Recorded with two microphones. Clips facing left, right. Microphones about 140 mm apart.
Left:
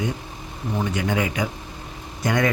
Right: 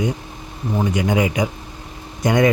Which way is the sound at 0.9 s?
15° right (ahead or behind).